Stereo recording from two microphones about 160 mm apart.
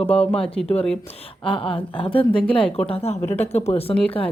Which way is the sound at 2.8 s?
40° left (ahead or behind).